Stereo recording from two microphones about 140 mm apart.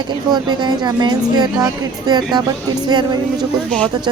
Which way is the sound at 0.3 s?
30° right (ahead or behind).